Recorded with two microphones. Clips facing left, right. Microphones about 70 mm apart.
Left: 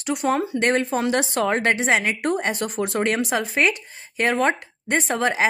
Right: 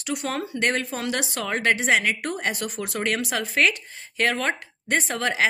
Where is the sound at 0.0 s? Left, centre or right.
Left.